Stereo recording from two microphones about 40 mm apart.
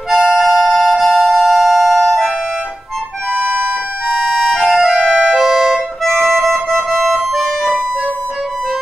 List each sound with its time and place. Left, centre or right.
0.2 s music: centre
4.4 s music: centre
4.7 s music: centre
5.1 s music: centre
5.4 s music: centre
6.0 s music: centre